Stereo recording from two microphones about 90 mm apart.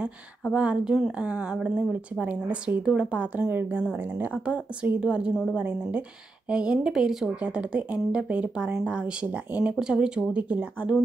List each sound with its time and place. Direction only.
0.6 s a woman's voice: 10° right (ahead or behind)
5.3 s a woman's voice: centre (ahead or behind)
5.6 s a woman's voice: 15° right (ahead or behind)